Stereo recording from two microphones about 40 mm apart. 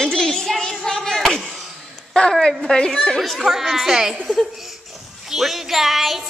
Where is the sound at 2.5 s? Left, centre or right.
Centre.